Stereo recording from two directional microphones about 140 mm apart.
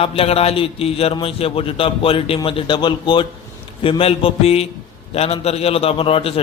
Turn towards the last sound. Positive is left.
turn(degrees=45)  # may be behind; listen again after turning